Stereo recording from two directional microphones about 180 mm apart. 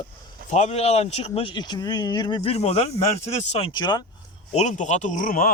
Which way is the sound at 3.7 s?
25° left (ahead or behind).